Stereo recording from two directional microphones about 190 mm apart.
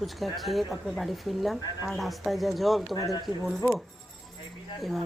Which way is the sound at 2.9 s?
20° left (ahead or behind).